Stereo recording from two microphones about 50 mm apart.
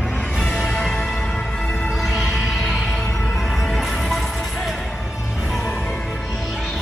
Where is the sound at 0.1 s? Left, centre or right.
Left.